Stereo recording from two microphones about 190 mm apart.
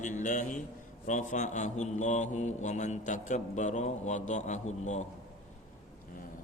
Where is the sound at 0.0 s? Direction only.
40° left (ahead or behind).